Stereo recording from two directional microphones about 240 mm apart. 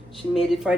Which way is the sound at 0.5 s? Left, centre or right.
Centre.